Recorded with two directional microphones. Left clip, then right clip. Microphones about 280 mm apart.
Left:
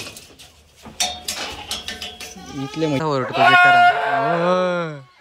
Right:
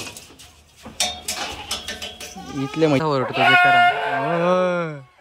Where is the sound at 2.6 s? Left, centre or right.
Right.